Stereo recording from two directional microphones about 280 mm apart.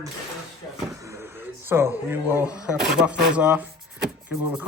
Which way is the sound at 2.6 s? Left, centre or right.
Centre.